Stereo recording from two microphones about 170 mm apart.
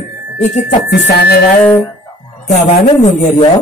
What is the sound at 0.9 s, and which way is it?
Speech, 75° left (ahead or behind).